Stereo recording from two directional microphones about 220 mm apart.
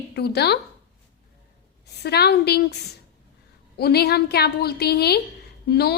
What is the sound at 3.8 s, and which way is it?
A woman's voice, 45° left (ahead or behind).